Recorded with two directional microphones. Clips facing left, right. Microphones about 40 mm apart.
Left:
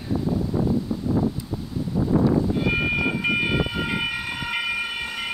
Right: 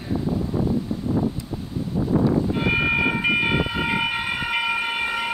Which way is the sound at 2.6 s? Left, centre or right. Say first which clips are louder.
Right 2 dB; centre.